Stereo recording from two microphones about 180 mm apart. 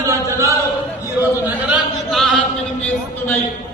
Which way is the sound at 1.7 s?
Centre (ahead or behind).